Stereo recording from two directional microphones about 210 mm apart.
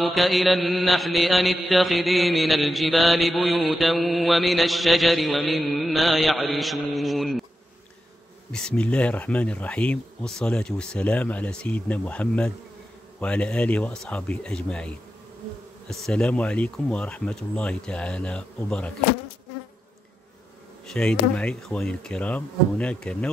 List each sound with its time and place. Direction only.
0.0 s mantra: centre (ahead or behind)
8.5 s mantra: 5° left (ahead or behind)
20.8 s mantra: 5° left (ahead or behind)